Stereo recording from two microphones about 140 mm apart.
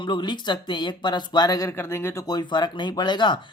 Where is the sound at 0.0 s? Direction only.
35° left (ahead or behind); by 2.2 s 15° left (ahead or behind).